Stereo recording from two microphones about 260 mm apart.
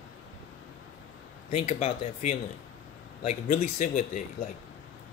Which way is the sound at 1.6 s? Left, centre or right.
Left.